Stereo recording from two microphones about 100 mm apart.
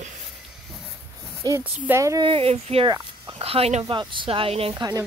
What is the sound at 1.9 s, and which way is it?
Speech, 30° right (ahead or behind).